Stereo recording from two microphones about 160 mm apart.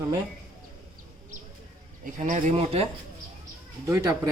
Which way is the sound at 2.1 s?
50° right (ahead or behind).